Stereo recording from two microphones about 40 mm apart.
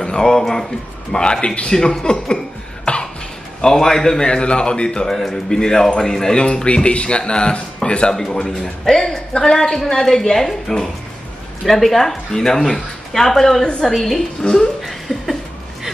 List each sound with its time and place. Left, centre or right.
0.0 s a man's voice: centre
1.8 s a man's voice: centre
2.8 s cough: left
3.6 s a man's voice: centre
6.3 s a man's voice: left
8.1 s a man's voice: centre
14.4 s a man's voice: centre
14.8 s laughter: centre